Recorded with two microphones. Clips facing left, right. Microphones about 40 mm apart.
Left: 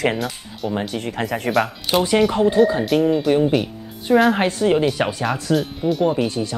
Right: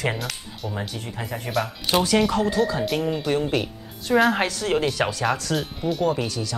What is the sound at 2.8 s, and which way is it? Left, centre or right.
Speech, centre.